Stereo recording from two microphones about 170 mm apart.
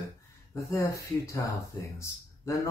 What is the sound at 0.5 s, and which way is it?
Speech, 15° left (ahead or behind).